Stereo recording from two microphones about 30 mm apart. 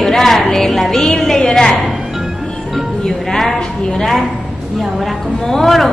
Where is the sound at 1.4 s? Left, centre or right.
Left.